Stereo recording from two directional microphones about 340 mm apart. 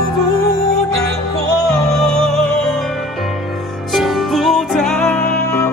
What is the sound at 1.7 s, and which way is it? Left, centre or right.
Music, centre.